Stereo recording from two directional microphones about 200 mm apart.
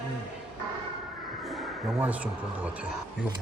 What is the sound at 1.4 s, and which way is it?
Speech, 5° right (ahead or behind).